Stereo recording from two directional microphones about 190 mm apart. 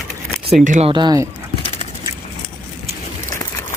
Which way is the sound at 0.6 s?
40° right (ahead or behind).